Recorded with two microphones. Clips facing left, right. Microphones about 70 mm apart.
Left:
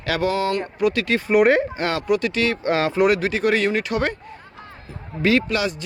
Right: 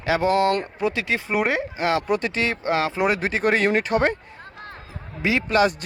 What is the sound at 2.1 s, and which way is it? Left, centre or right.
Speech, right.